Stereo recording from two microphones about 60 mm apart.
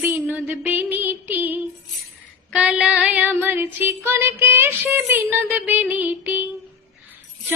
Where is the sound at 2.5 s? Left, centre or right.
Centre.